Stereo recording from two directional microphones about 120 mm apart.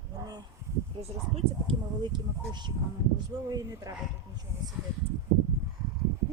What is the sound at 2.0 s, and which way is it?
Speech, 40° right (ahead or behind).